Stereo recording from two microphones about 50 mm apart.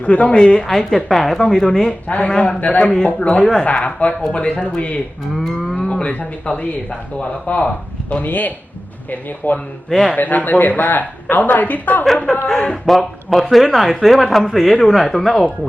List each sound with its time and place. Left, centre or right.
0.0 s speech: left; by 1.9 s centre
1.9 s speech: left
5.3 s speech: centre
6.0 s speech: left
12.1 s speech: centre
12.6 s speech: centre